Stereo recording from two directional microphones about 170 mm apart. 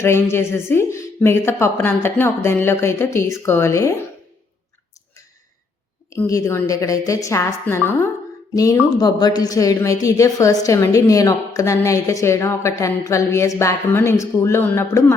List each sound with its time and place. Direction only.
0.0 s a woman's voice: 15° left (ahead or behind)
6.1 s a woman's voice: 20° left (ahead or behind)